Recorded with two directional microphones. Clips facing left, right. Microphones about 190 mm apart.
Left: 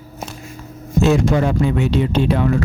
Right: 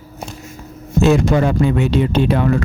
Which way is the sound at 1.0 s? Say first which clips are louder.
Right 2 dB; 65° right (ahead or behind).